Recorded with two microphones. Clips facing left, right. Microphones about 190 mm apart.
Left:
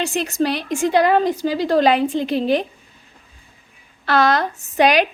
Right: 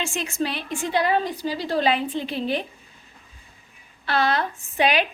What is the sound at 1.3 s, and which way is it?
Speech, 45° left (ahead or behind).